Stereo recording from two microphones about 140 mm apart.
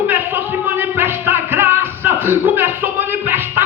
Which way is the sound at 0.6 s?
15° right (ahead or behind).